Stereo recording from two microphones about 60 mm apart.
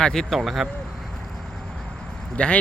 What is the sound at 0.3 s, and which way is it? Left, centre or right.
Speech, centre.